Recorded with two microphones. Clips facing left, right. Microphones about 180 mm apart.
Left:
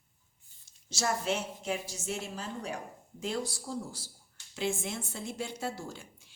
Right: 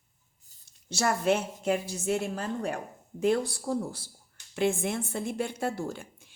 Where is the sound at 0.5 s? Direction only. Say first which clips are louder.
Right 2 dB; 40° right (ahead or behind).